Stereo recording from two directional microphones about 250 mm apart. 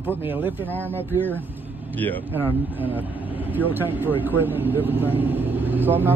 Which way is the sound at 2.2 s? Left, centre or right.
Centre.